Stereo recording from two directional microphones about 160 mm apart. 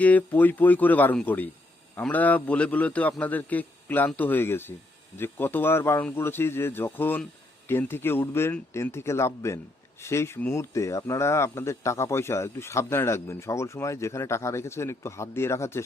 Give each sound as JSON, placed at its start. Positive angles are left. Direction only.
{"t": 0.0, "sound": "speech", "side_deg": 10}